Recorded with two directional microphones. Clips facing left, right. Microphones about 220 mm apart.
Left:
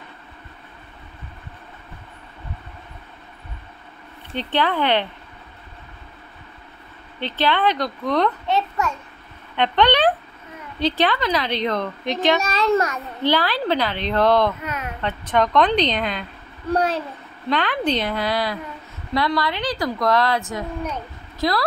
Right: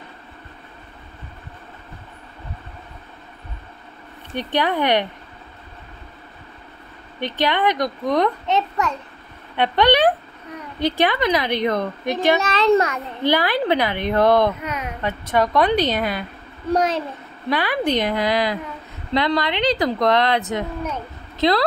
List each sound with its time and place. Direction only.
4.4 s a child's voice: 15° right (ahead or behind)
7.2 s a child's voice: 15° right (ahead or behind)
17.5 s a child's voice: 10° right (ahead or behind)